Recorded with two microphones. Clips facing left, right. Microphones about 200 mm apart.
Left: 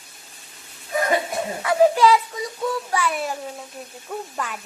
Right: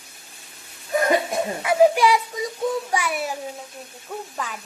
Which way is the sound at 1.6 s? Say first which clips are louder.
Even; 15° right (ahead or behind).